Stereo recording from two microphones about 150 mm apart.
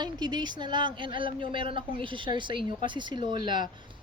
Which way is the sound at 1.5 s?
35° right (ahead or behind).